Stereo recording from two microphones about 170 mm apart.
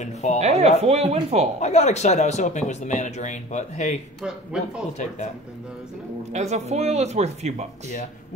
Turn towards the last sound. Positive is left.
turn(degrees=-40)  # may be behind; listen again after turning